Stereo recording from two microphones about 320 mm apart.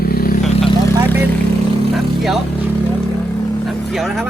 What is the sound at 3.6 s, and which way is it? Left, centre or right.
Speech, centre.